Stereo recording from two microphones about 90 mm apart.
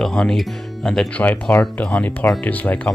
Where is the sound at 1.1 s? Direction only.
20° left (ahead or behind).